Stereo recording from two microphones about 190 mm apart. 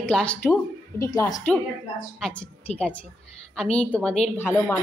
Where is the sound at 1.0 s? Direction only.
15° left (ahead or behind).